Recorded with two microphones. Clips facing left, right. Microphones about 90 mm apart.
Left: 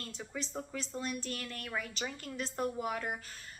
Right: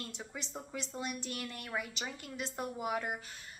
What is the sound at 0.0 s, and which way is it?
A woman's voice, 20° right (ahead or behind).